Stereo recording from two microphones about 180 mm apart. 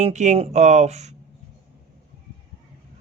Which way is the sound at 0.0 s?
40° right (ahead or behind).